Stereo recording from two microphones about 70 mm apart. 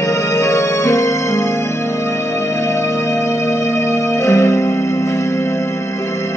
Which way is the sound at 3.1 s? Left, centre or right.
Left.